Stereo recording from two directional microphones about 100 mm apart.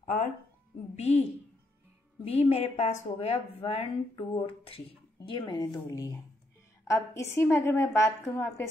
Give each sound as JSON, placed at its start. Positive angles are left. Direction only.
{"t": 0.9, "sound": "speech", "side_deg": 90}
{"t": 2.2, "sound": "a woman's voice", "side_deg": 90}